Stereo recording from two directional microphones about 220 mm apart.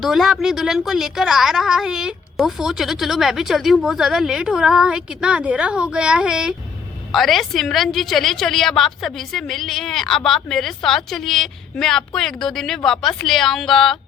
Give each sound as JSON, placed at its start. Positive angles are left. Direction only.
{"t": 0.0, "sound": "a woman's voice", "side_deg": 0}